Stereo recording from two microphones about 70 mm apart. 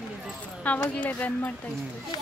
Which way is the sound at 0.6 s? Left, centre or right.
Centre.